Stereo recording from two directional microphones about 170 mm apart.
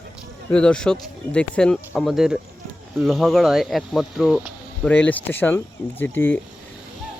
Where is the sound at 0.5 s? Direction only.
5° left (ahead or behind).